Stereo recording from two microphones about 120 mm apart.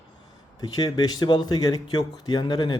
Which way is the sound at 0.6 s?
30° left (ahead or behind).